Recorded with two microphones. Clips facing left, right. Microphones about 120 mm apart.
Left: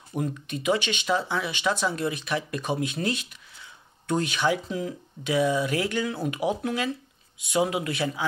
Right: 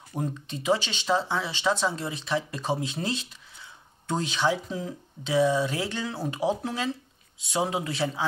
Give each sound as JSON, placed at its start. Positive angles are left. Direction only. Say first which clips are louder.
{"t": 0.1, "sound": "speech", "louder": "left 2 dB", "side_deg": -30}